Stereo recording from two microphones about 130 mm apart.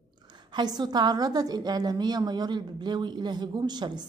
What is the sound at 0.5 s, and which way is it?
A woman's voice, 35° right (ahead or behind).